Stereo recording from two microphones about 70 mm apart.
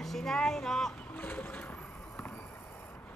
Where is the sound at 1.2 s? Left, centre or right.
Left.